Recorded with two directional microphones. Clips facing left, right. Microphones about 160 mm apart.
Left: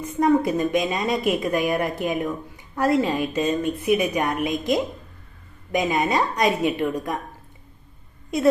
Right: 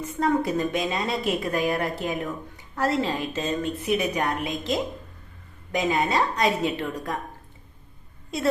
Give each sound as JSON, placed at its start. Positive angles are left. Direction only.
{"t": 0.0, "sound": "a woman's voice", "side_deg": 15}